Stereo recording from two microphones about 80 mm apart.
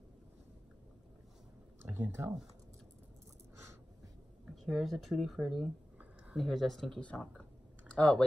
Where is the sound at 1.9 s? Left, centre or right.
Right.